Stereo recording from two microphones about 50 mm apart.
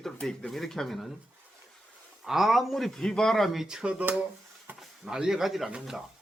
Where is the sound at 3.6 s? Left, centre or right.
Centre.